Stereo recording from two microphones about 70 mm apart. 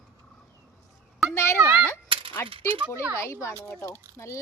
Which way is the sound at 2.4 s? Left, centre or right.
Left.